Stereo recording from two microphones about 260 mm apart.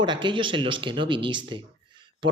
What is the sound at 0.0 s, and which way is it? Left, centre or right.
Speech, centre.